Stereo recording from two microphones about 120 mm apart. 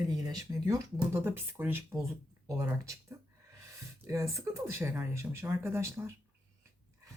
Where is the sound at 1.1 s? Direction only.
15° right (ahead or behind).